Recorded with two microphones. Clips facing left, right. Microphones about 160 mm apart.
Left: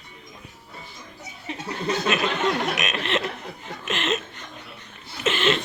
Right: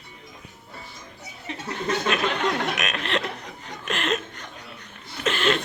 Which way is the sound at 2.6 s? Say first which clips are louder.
Left 1 dB; centre (ahead or behind).